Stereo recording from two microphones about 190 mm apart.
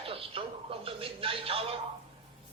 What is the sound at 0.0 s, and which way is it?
Television, 30° right (ahead or behind).